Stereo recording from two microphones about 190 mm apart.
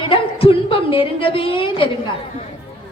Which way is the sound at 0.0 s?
30° left (ahead or behind).